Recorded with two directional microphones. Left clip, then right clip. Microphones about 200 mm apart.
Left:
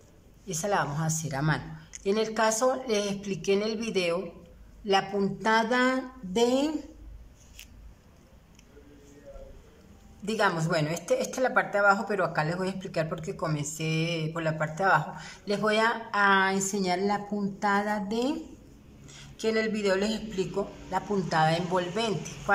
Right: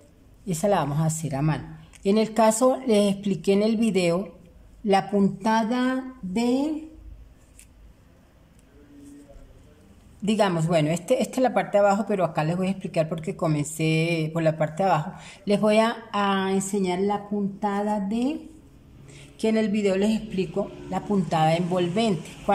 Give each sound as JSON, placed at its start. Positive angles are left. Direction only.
{"t": 0.5, "sound": "a woman's voice", "side_deg": -20}
{"t": 10.2, "sound": "speech", "side_deg": -15}